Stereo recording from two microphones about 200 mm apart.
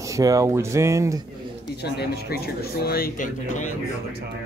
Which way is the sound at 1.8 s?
55° left (ahead or behind).